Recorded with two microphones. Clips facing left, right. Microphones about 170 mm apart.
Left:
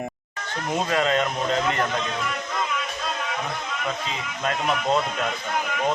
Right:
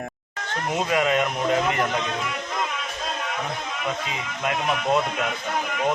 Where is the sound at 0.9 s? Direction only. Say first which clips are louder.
Right 1 dB; 15° right (ahead or behind).